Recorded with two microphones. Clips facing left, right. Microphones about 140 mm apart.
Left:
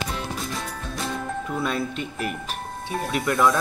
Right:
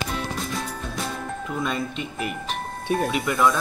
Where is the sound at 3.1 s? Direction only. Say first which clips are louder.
Left 4 dB; centre (ahead or behind).